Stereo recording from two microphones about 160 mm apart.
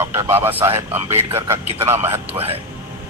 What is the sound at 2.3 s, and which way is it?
Speech, 35° right (ahead or behind).